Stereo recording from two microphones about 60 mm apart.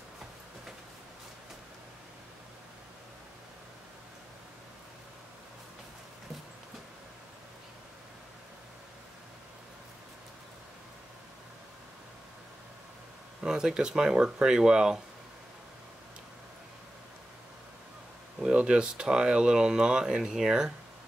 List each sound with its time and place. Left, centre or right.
13.4 s speech: centre
18.4 s speech: centre